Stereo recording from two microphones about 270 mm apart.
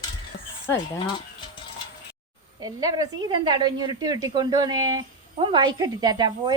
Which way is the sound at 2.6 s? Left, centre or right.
Centre.